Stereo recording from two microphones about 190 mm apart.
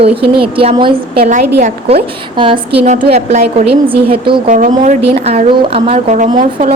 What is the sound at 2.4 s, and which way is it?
A woman's voice, 25° right (ahead or behind).